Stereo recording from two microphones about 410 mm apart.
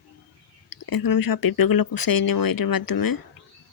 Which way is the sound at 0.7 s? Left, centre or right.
Left.